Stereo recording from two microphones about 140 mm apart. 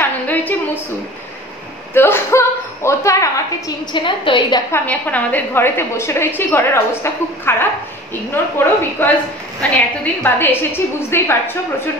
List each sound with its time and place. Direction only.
0.0 s a sound: 10° left (ahead or behind)
2.0 s a woman's voice: 15° left (ahead or behind)
3.9 s a woman's voice: 35° left (ahead or behind)
4.6 s a woman's voice: 15° left (ahead or behind)
10.2 s a woman's voice: 15° left (ahead or behind)